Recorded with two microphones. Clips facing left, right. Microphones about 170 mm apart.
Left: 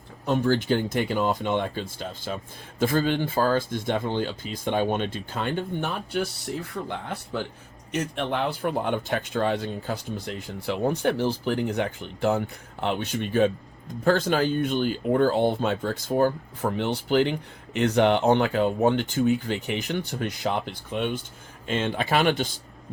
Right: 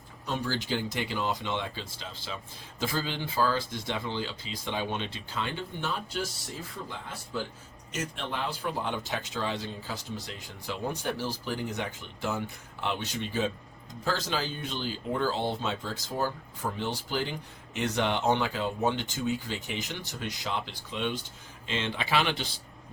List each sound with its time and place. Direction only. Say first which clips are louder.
0.3 s speech: left 9 dB; 55° left (ahead or behind)